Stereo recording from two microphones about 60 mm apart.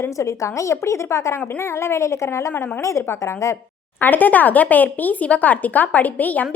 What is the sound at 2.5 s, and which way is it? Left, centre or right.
Speech, left.